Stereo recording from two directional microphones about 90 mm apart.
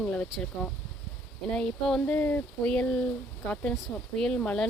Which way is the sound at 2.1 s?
20° left (ahead or behind).